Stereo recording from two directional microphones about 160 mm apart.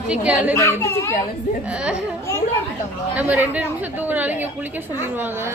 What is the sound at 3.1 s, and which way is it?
A woman's voice, 10° right (ahead or behind).